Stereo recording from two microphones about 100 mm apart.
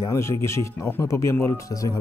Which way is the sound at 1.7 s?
35° left (ahead or behind).